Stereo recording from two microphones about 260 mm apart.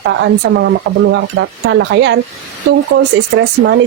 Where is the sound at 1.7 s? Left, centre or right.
Right.